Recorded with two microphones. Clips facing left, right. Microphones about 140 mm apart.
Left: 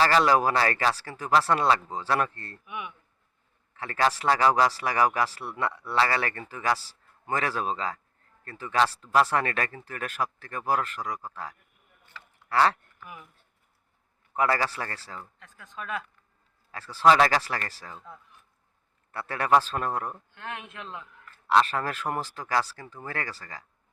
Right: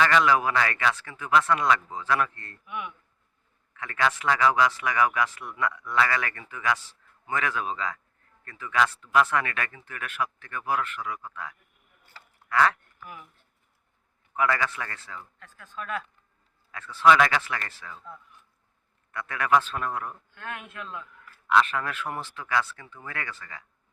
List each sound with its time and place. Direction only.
0.0 s speech: 35° left (ahead or behind)
2.6 s speech: 15° left (ahead or behind)
3.8 s speech: 35° left (ahead or behind)
12.1 s a sound: 35° right (ahead or behind)
12.5 s speech: 30° left (ahead or behind)
14.3 s speech: 35° left (ahead or behind)
16.7 s speech: 35° left (ahead or behind)
19.1 s speech: 35° left (ahead or behind)
20.3 s speech: 25° left (ahead or behind)
21.4 s speech: 35° left (ahead or behind)